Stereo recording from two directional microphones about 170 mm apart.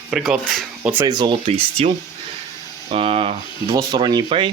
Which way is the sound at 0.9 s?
20° right (ahead or behind).